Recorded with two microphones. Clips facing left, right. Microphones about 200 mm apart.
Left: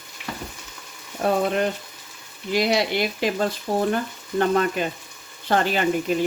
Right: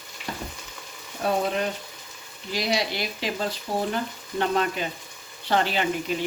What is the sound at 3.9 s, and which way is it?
Frying, 50° left (ahead or behind).